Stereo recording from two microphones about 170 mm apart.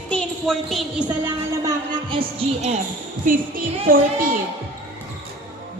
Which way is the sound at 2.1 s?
35° right (ahead or behind).